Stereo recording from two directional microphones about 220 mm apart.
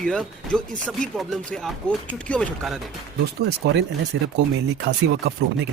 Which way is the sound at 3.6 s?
50° right (ahead or behind).